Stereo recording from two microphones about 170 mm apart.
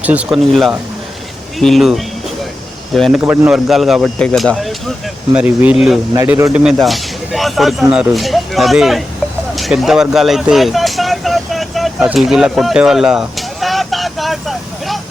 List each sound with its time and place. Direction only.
0.0 s a man's voice: 10° right (ahead or behind)
3.2 s speech: 10° right (ahead or behind)
3.5 s a man's voice: centre (ahead or behind)
6.6 s a man's voice: centre (ahead or behind)
9.6 s vehicle: centre (ahead or behind)